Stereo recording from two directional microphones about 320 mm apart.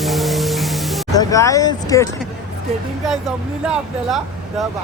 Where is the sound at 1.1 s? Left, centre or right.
Centre.